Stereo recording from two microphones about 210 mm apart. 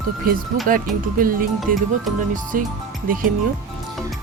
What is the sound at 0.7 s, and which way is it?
Speech, 40° right (ahead or behind).